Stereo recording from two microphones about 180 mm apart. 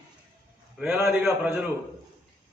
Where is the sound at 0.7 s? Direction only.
10° right (ahead or behind).